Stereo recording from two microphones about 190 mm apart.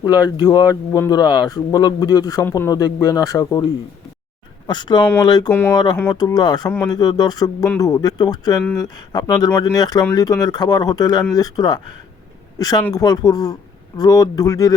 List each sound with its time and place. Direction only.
0.0 s speech: 20° left (ahead or behind)
5.5 s speech: 10° left (ahead or behind)
5.7 s speech: 20° left (ahead or behind)